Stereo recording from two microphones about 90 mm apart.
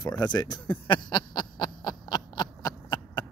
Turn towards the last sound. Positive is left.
turn(degrees=55)  # may be behind; listen again after turning